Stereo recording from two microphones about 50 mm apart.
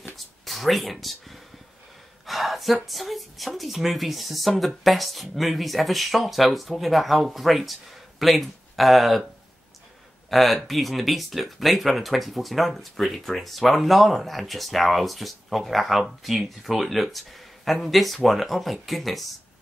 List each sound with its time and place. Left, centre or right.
0.5 s speech: centre
10.3 s speech: centre